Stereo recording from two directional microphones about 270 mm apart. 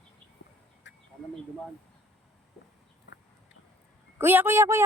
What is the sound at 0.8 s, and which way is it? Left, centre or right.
Duck, left.